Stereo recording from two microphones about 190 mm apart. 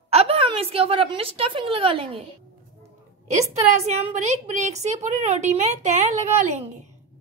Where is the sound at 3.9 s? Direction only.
35° right (ahead or behind).